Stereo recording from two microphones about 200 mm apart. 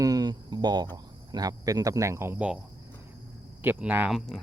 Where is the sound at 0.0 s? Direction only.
20° right (ahead or behind).